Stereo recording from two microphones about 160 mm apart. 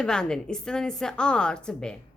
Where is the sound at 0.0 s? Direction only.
5° left (ahead or behind).